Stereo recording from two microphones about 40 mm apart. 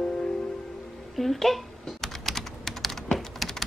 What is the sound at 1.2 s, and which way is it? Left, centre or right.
Typing, centre.